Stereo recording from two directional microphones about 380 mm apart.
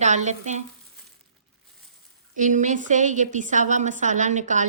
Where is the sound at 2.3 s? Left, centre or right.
Centre.